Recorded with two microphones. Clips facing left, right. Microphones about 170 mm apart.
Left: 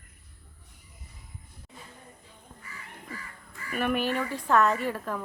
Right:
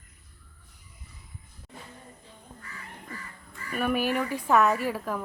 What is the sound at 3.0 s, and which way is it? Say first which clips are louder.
Speech: even; 5° left (ahead or behind).